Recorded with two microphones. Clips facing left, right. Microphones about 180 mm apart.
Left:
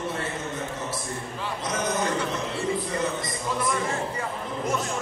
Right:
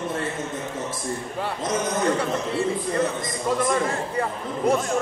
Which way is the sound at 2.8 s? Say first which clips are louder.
Right 4 dB; 50° right (ahead or behind).